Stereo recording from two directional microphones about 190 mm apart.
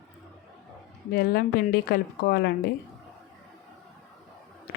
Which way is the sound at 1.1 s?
55° left (ahead or behind).